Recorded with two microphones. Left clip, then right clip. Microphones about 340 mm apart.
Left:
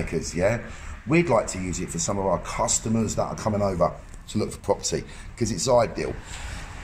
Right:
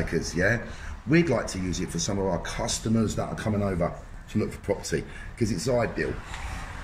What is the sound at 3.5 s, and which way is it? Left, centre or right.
Speech, left.